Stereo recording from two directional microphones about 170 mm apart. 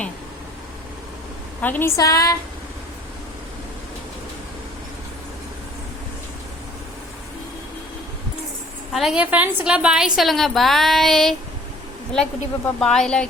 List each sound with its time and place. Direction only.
1.6 s a woman's voice: 10° left (ahead or behind)
8.9 s a woman's voice: centre (ahead or behind)